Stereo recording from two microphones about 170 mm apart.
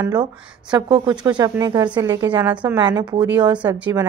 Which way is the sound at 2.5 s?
10° right (ahead or behind).